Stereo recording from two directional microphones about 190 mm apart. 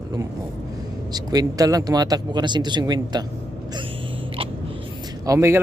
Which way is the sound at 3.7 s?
25° right (ahead or behind).